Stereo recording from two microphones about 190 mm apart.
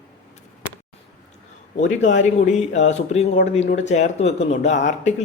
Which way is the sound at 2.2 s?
40° left (ahead or behind).